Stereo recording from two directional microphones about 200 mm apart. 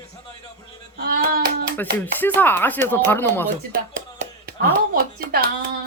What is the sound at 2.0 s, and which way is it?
Speech, 10° left (ahead or behind).